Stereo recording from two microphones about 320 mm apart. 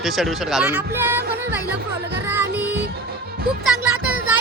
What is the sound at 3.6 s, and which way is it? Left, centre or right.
Music, left.